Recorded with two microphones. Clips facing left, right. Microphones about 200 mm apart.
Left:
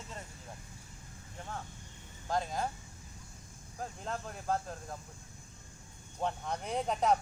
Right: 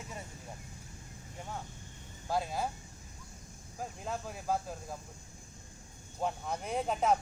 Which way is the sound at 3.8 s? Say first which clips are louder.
Right 1 dB; 5° right (ahead or behind).